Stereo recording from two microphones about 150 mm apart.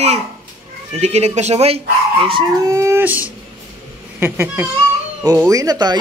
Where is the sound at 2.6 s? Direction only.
20° right (ahead or behind).